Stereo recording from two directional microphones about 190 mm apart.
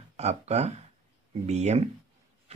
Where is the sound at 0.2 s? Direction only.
35° right (ahead or behind).